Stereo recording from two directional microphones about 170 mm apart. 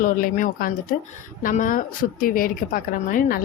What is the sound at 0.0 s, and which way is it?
Speech, 50° left (ahead or behind).